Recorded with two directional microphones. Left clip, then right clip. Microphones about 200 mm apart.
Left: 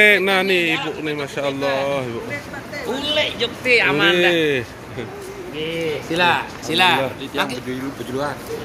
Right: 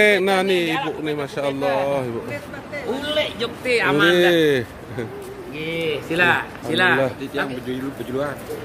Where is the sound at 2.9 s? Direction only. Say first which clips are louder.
Left 3 dB; 60° right (ahead or behind).